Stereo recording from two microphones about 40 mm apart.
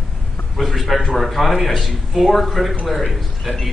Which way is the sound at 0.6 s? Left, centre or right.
Centre.